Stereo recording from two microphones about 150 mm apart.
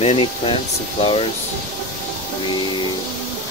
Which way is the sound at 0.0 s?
40° left (ahead or behind).